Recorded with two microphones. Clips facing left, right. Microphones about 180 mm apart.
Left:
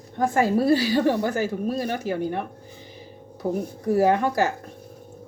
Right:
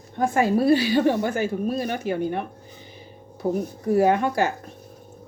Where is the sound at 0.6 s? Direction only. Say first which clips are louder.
Right 1 dB; 40° left (ahead or behind).